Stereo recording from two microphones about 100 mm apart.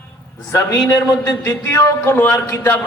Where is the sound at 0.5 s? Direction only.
35° left (ahead or behind).